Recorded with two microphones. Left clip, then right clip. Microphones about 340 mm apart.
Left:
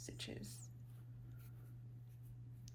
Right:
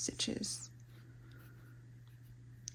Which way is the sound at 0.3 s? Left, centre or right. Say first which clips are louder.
Right 13 dB; centre.